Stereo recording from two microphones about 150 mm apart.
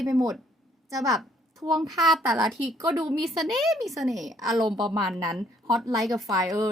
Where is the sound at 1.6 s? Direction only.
25° right (ahead or behind).